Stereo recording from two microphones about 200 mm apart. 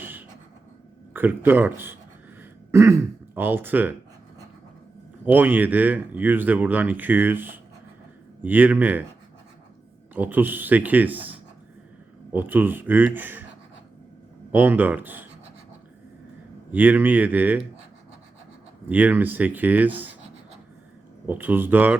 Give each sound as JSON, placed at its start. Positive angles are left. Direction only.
{"t": 0.0, "sound": "a sound", "side_deg": -10}
{"t": 1.1, "sound": "speech", "side_deg": -10}
{"t": 5.2, "sound": "speech", "side_deg": -10}
{"t": 10.2, "sound": "speech", "side_deg": -10}
{"t": 14.5, "sound": "speech", "side_deg": -10}
{"t": 16.7, "sound": "speech", "side_deg": -10}
{"t": 18.9, "sound": "speech", "side_deg": -10}
{"t": 21.2, "sound": "speech", "side_deg": -10}